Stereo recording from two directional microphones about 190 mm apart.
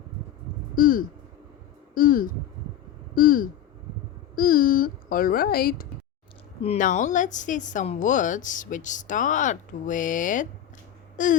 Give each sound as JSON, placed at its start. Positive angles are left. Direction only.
{"t": 0.8, "sound": "a sound", "side_deg": 45}
{"t": 6.6, "sound": "speech", "side_deg": 35}
{"t": 11.2, "sound": "wail", "side_deg": 45}